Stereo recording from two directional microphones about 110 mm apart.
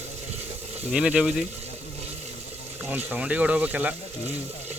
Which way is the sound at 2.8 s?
15° right (ahead or behind).